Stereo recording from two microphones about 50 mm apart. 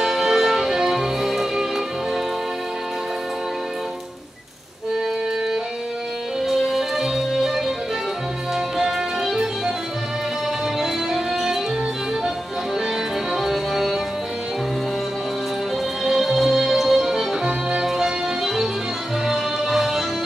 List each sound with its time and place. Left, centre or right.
0.0 s music: centre
6.4 s music: centre
10.8 s music: centre
13.3 s music: centre
16.0 s music: centre
17.5 s music: centre
17.8 s music: centre